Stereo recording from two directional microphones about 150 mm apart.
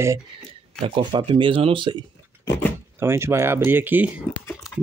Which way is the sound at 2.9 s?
15° right (ahead or behind).